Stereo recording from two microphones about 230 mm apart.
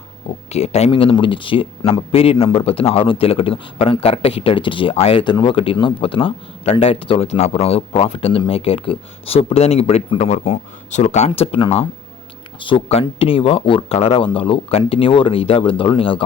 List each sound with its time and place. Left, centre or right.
0.5 s speech: left